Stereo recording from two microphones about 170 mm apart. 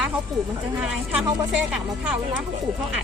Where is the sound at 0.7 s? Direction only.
5° right (ahead or behind).